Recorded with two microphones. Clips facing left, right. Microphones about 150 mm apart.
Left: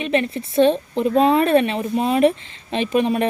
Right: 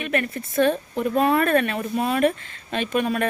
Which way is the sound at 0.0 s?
25° left (ahead or behind).